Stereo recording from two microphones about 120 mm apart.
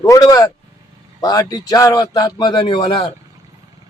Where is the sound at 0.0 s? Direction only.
30° left (ahead or behind).